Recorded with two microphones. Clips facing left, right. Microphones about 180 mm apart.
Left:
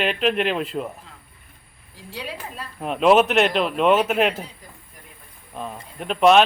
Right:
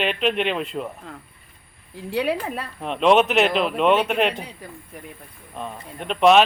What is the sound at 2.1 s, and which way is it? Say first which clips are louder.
Speech: right 10 dB; 65° right (ahead or behind).